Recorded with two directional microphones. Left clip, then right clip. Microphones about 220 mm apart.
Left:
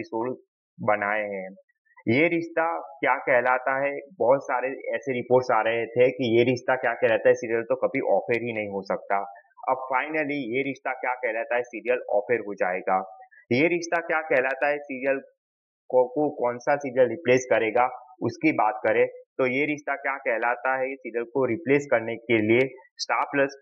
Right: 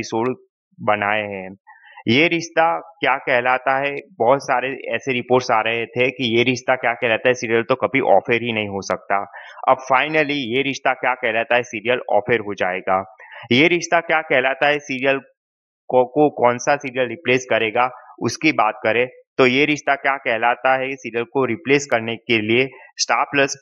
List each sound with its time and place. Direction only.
0.0 s speech: 35° right (ahead or behind)
4.8 s speech: 25° right (ahead or behind)
7.3 s speech: 45° right (ahead or behind)
16.7 s speech: 25° right (ahead or behind)